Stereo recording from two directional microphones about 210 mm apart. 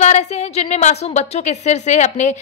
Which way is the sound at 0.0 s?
30° left (ahead or behind).